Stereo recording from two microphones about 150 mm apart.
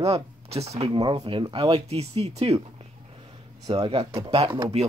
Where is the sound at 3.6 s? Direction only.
30° right (ahead or behind).